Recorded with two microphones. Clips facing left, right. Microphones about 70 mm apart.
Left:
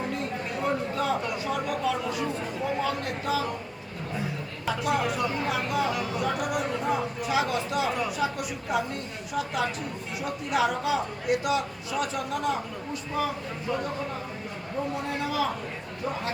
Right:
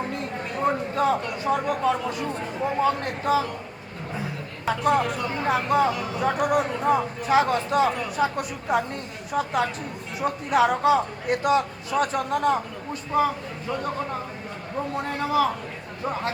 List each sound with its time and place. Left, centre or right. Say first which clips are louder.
0.6 s a sound: right 6 dB; right
1.5 s speech: right 7 dB; right
4.8 s speech: right 4 dB; centre
5.4 s a man's voice: right 6 dB; right